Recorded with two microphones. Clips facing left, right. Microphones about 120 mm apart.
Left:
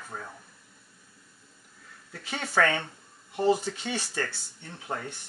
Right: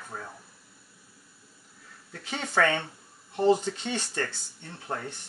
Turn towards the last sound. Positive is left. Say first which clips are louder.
# even
turn(degrees=0)  # may be behind; listen again after turning